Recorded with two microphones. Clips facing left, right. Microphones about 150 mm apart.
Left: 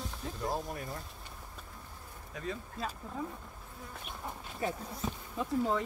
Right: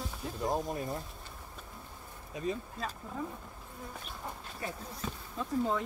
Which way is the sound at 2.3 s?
20° right (ahead or behind).